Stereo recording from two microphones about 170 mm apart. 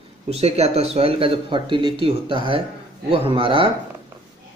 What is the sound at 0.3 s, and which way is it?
Speech, 40° right (ahead or behind).